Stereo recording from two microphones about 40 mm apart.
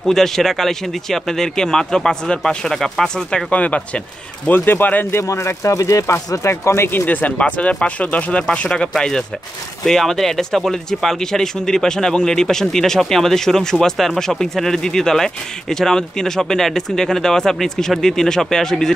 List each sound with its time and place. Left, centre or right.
0.0 s speech: centre
3.4 s speech: left
4.5 s speech: left
6.1 s speech: left
7.1 s speech: left; by 18.9 s centre